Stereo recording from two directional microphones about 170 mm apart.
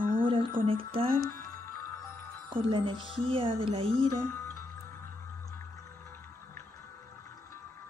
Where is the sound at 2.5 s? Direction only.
30° right (ahead or behind).